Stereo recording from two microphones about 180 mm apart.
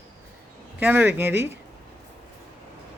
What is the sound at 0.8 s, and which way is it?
Speech, 10° right (ahead or behind).